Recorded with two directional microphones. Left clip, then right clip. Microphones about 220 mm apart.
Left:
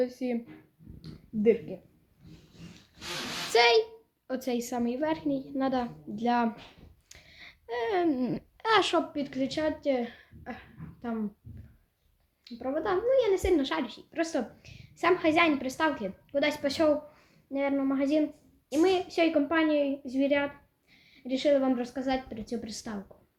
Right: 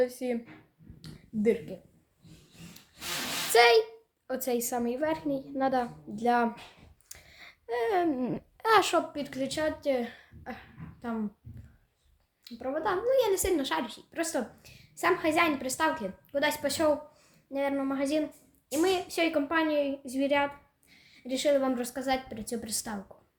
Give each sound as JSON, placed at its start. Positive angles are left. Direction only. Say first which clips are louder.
{"t": 0.0, "sound": "a woman's voice", "louder": "right 2 dB", "side_deg": -20}
{"t": 1.4, "sound": "a woman's voice", "louder": "left 3 dB", "side_deg": -25}
{"t": 3.5, "sound": "a woman's voice", "louder": "right 1 dB", "side_deg": -25}
{"t": 12.5, "sound": "a woman's voice", "louder": "even", "side_deg": -20}